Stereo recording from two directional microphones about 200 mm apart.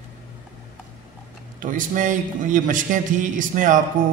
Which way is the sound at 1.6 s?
40° right (ahead or behind).